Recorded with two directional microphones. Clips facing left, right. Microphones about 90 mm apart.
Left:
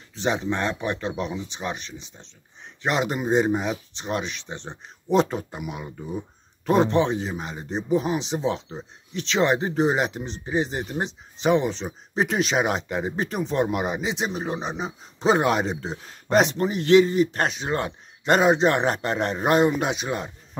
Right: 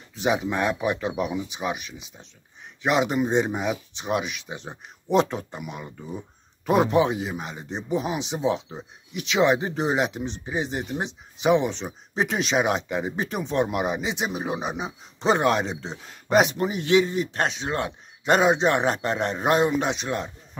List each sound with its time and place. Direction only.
0.1 s speech: 5° right (ahead or behind)